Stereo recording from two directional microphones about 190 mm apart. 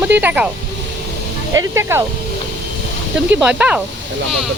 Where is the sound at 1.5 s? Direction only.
15° right (ahead or behind).